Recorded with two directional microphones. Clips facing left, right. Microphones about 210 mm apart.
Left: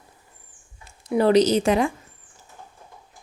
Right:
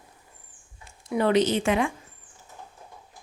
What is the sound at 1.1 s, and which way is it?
Speech, 35° left (ahead or behind).